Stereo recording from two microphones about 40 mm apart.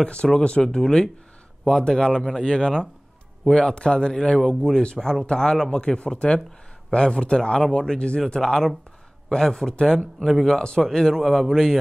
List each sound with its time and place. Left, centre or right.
0.0 s speech: left; by 11.8 s centre